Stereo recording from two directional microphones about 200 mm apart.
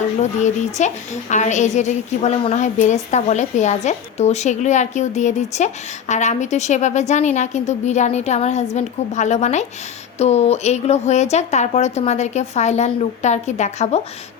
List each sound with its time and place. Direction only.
0.2 s a woman's voice: 35° left (ahead or behind)